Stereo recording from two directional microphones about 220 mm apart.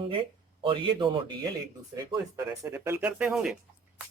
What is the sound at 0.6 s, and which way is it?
Speech, 20° right (ahead or behind).